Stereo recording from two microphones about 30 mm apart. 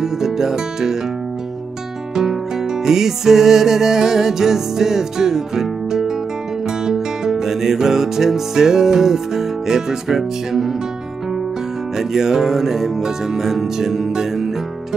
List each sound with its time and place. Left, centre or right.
0.0 s music: centre
2.8 s music: centre
12.0 s music: centre